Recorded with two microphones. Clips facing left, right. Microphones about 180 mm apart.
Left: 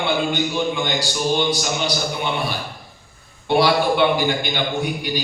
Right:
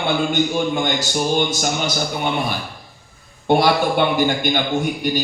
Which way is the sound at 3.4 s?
45° right (ahead or behind).